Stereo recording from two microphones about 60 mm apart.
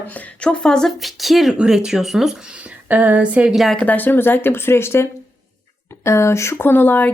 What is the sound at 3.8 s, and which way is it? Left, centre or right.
Speech, left.